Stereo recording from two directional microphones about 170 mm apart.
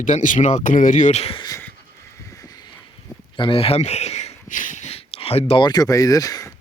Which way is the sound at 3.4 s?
30° left (ahead or behind).